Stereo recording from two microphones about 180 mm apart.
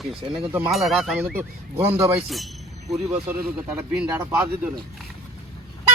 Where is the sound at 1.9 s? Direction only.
10° right (ahead or behind).